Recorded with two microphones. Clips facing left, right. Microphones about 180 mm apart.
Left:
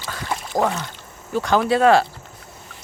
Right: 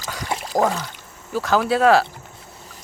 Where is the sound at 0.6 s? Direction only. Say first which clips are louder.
Right 1 dB; 10° right (ahead or behind).